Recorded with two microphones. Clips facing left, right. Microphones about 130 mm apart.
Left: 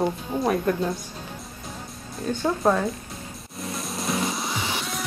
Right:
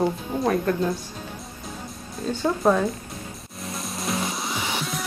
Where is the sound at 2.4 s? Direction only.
Centre (ahead or behind).